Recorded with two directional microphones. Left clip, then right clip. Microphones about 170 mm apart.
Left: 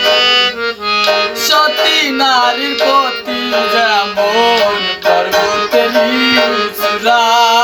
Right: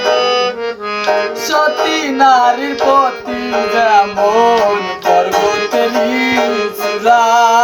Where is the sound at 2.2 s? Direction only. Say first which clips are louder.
Right 6 dB; 15° left (ahead or behind).